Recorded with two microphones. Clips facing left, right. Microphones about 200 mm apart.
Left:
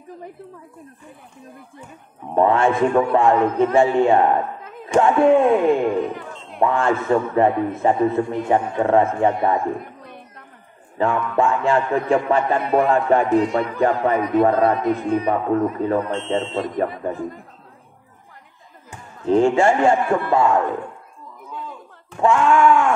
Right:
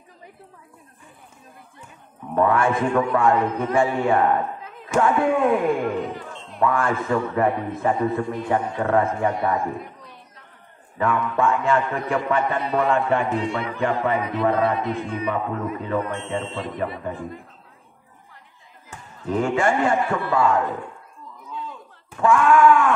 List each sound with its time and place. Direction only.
2.3 s a man's voice: 25° left (ahead or behind)
10.0 s a sound: 55° left (ahead or behind)
11.0 s a man's voice: 30° left (ahead or behind)
12.5 s speech: 55° left (ahead or behind)
12.9 s a man's voice: 40° left (ahead or behind)
19.2 s a man's voice: 25° left (ahead or behind)
22.2 s a man's voice: 25° left (ahead or behind)